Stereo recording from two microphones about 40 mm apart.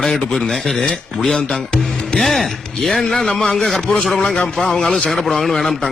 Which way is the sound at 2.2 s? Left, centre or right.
Centre.